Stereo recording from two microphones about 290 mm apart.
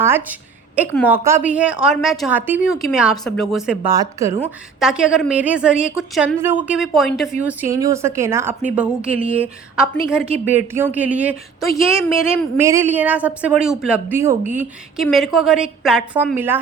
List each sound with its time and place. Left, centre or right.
0.0 s a woman's voice: centre
11.9 s a woman's voice: centre
12.5 s a woman's voice: centre